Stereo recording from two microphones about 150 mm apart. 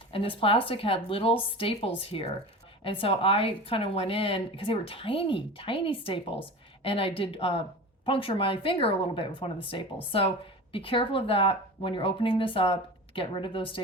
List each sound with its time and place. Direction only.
0.1 s speech: 35° left (ahead or behind)